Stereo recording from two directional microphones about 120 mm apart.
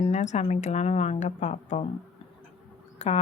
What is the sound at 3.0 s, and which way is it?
Speech, 65° left (ahead or behind).